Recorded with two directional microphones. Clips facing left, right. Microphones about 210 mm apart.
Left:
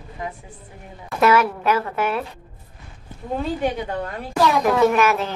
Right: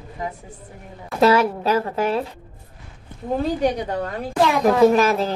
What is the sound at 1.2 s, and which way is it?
A woman's voice, 30° right (ahead or behind).